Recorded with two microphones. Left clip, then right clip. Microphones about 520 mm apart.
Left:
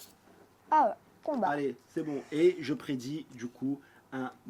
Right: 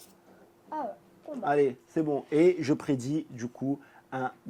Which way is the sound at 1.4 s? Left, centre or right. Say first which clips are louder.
Right 11 dB; right.